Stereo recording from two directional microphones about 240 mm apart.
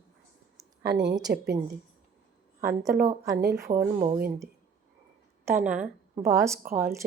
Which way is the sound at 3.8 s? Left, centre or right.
Right.